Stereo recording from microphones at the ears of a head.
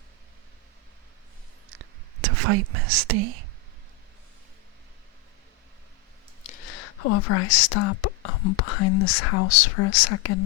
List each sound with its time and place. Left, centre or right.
1.7 s whispering: right
6.4 s speech: left